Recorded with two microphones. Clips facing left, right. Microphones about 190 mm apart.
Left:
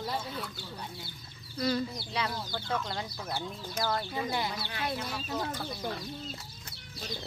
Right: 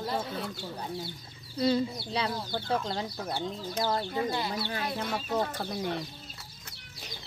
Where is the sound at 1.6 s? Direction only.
25° right (ahead or behind).